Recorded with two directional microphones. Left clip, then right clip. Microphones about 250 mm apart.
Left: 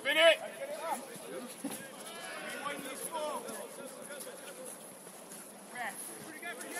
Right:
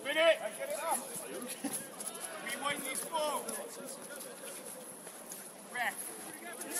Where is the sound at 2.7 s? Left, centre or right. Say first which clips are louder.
Right 3 dB; right.